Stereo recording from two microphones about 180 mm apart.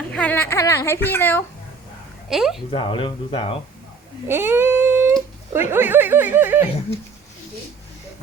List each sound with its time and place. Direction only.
0.1 s speech: 5° left (ahead or behind)
2.3 s speech: centre (ahead or behind)
2.6 s speech: 30° left (ahead or behind)
4.3 s a sound: 15° right (ahead or behind)
5.5 s speech: 10° right (ahead or behind)